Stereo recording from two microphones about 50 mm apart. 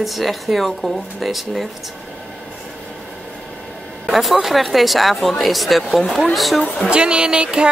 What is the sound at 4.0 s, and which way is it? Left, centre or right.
Speech, centre.